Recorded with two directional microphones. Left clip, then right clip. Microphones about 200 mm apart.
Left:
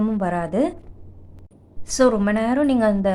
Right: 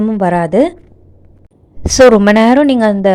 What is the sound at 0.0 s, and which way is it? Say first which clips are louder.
Speech: right 10 dB; 30° right (ahead or behind).